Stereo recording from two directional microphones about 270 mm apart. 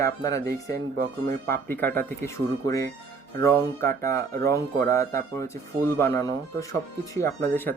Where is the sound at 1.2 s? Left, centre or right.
Right.